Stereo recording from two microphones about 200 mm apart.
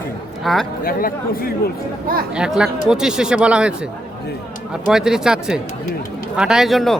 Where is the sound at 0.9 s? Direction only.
45° left (ahead or behind).